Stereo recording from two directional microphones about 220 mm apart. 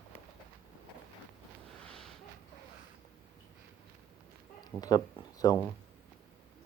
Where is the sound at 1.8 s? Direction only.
5° left (ahead or behind).